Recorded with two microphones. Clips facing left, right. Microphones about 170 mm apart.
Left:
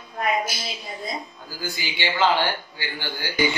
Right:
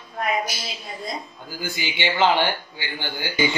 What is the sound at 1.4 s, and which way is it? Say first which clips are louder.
A man's voice: right 5 dB; 20° right (ahead or behind).